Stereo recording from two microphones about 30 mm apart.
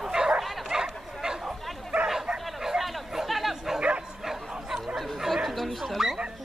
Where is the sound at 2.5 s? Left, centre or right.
Centre.